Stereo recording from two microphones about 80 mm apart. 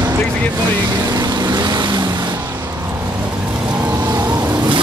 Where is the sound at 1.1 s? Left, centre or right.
Right.